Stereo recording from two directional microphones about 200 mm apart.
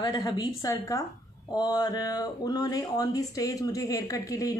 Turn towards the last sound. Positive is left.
turn(degrees=15)  # may be behind; listen again after turning